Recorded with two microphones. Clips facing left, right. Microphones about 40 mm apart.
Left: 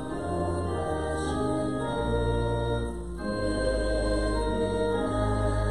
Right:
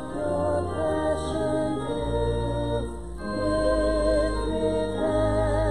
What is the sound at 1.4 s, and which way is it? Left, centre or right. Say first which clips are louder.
Music: right 3 dB; right.